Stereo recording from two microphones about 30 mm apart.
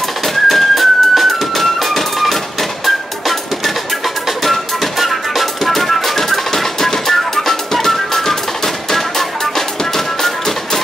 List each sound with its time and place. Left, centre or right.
0.2 s music: centre